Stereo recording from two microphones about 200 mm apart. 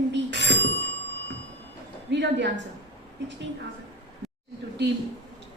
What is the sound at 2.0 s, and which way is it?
Speech, 60° right (ahead or behind).